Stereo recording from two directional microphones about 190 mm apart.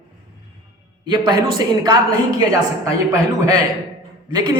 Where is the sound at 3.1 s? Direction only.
20° right (ahead or behind).